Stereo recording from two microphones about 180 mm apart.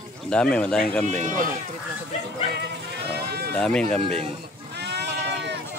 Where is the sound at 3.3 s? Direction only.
65° right (ahead or behind).